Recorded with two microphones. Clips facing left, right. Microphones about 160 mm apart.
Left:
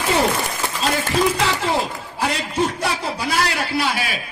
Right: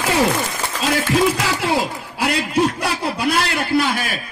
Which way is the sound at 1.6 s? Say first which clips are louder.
Right 2 dB; 80° right.